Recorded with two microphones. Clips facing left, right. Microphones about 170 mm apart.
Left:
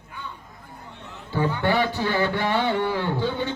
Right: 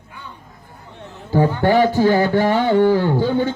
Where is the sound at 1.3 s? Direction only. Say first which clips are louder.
Right 7 dB; 40° right (ahead or behind).